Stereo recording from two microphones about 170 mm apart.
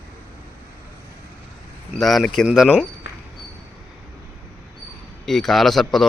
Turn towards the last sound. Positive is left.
turn(degrees=0)  # may be behind; listen again after turning